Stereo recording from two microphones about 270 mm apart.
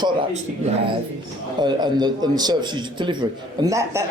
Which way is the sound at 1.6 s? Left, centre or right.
Centre.